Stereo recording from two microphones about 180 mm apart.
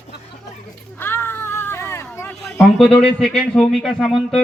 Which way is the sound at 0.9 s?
10° left (ahead or behind).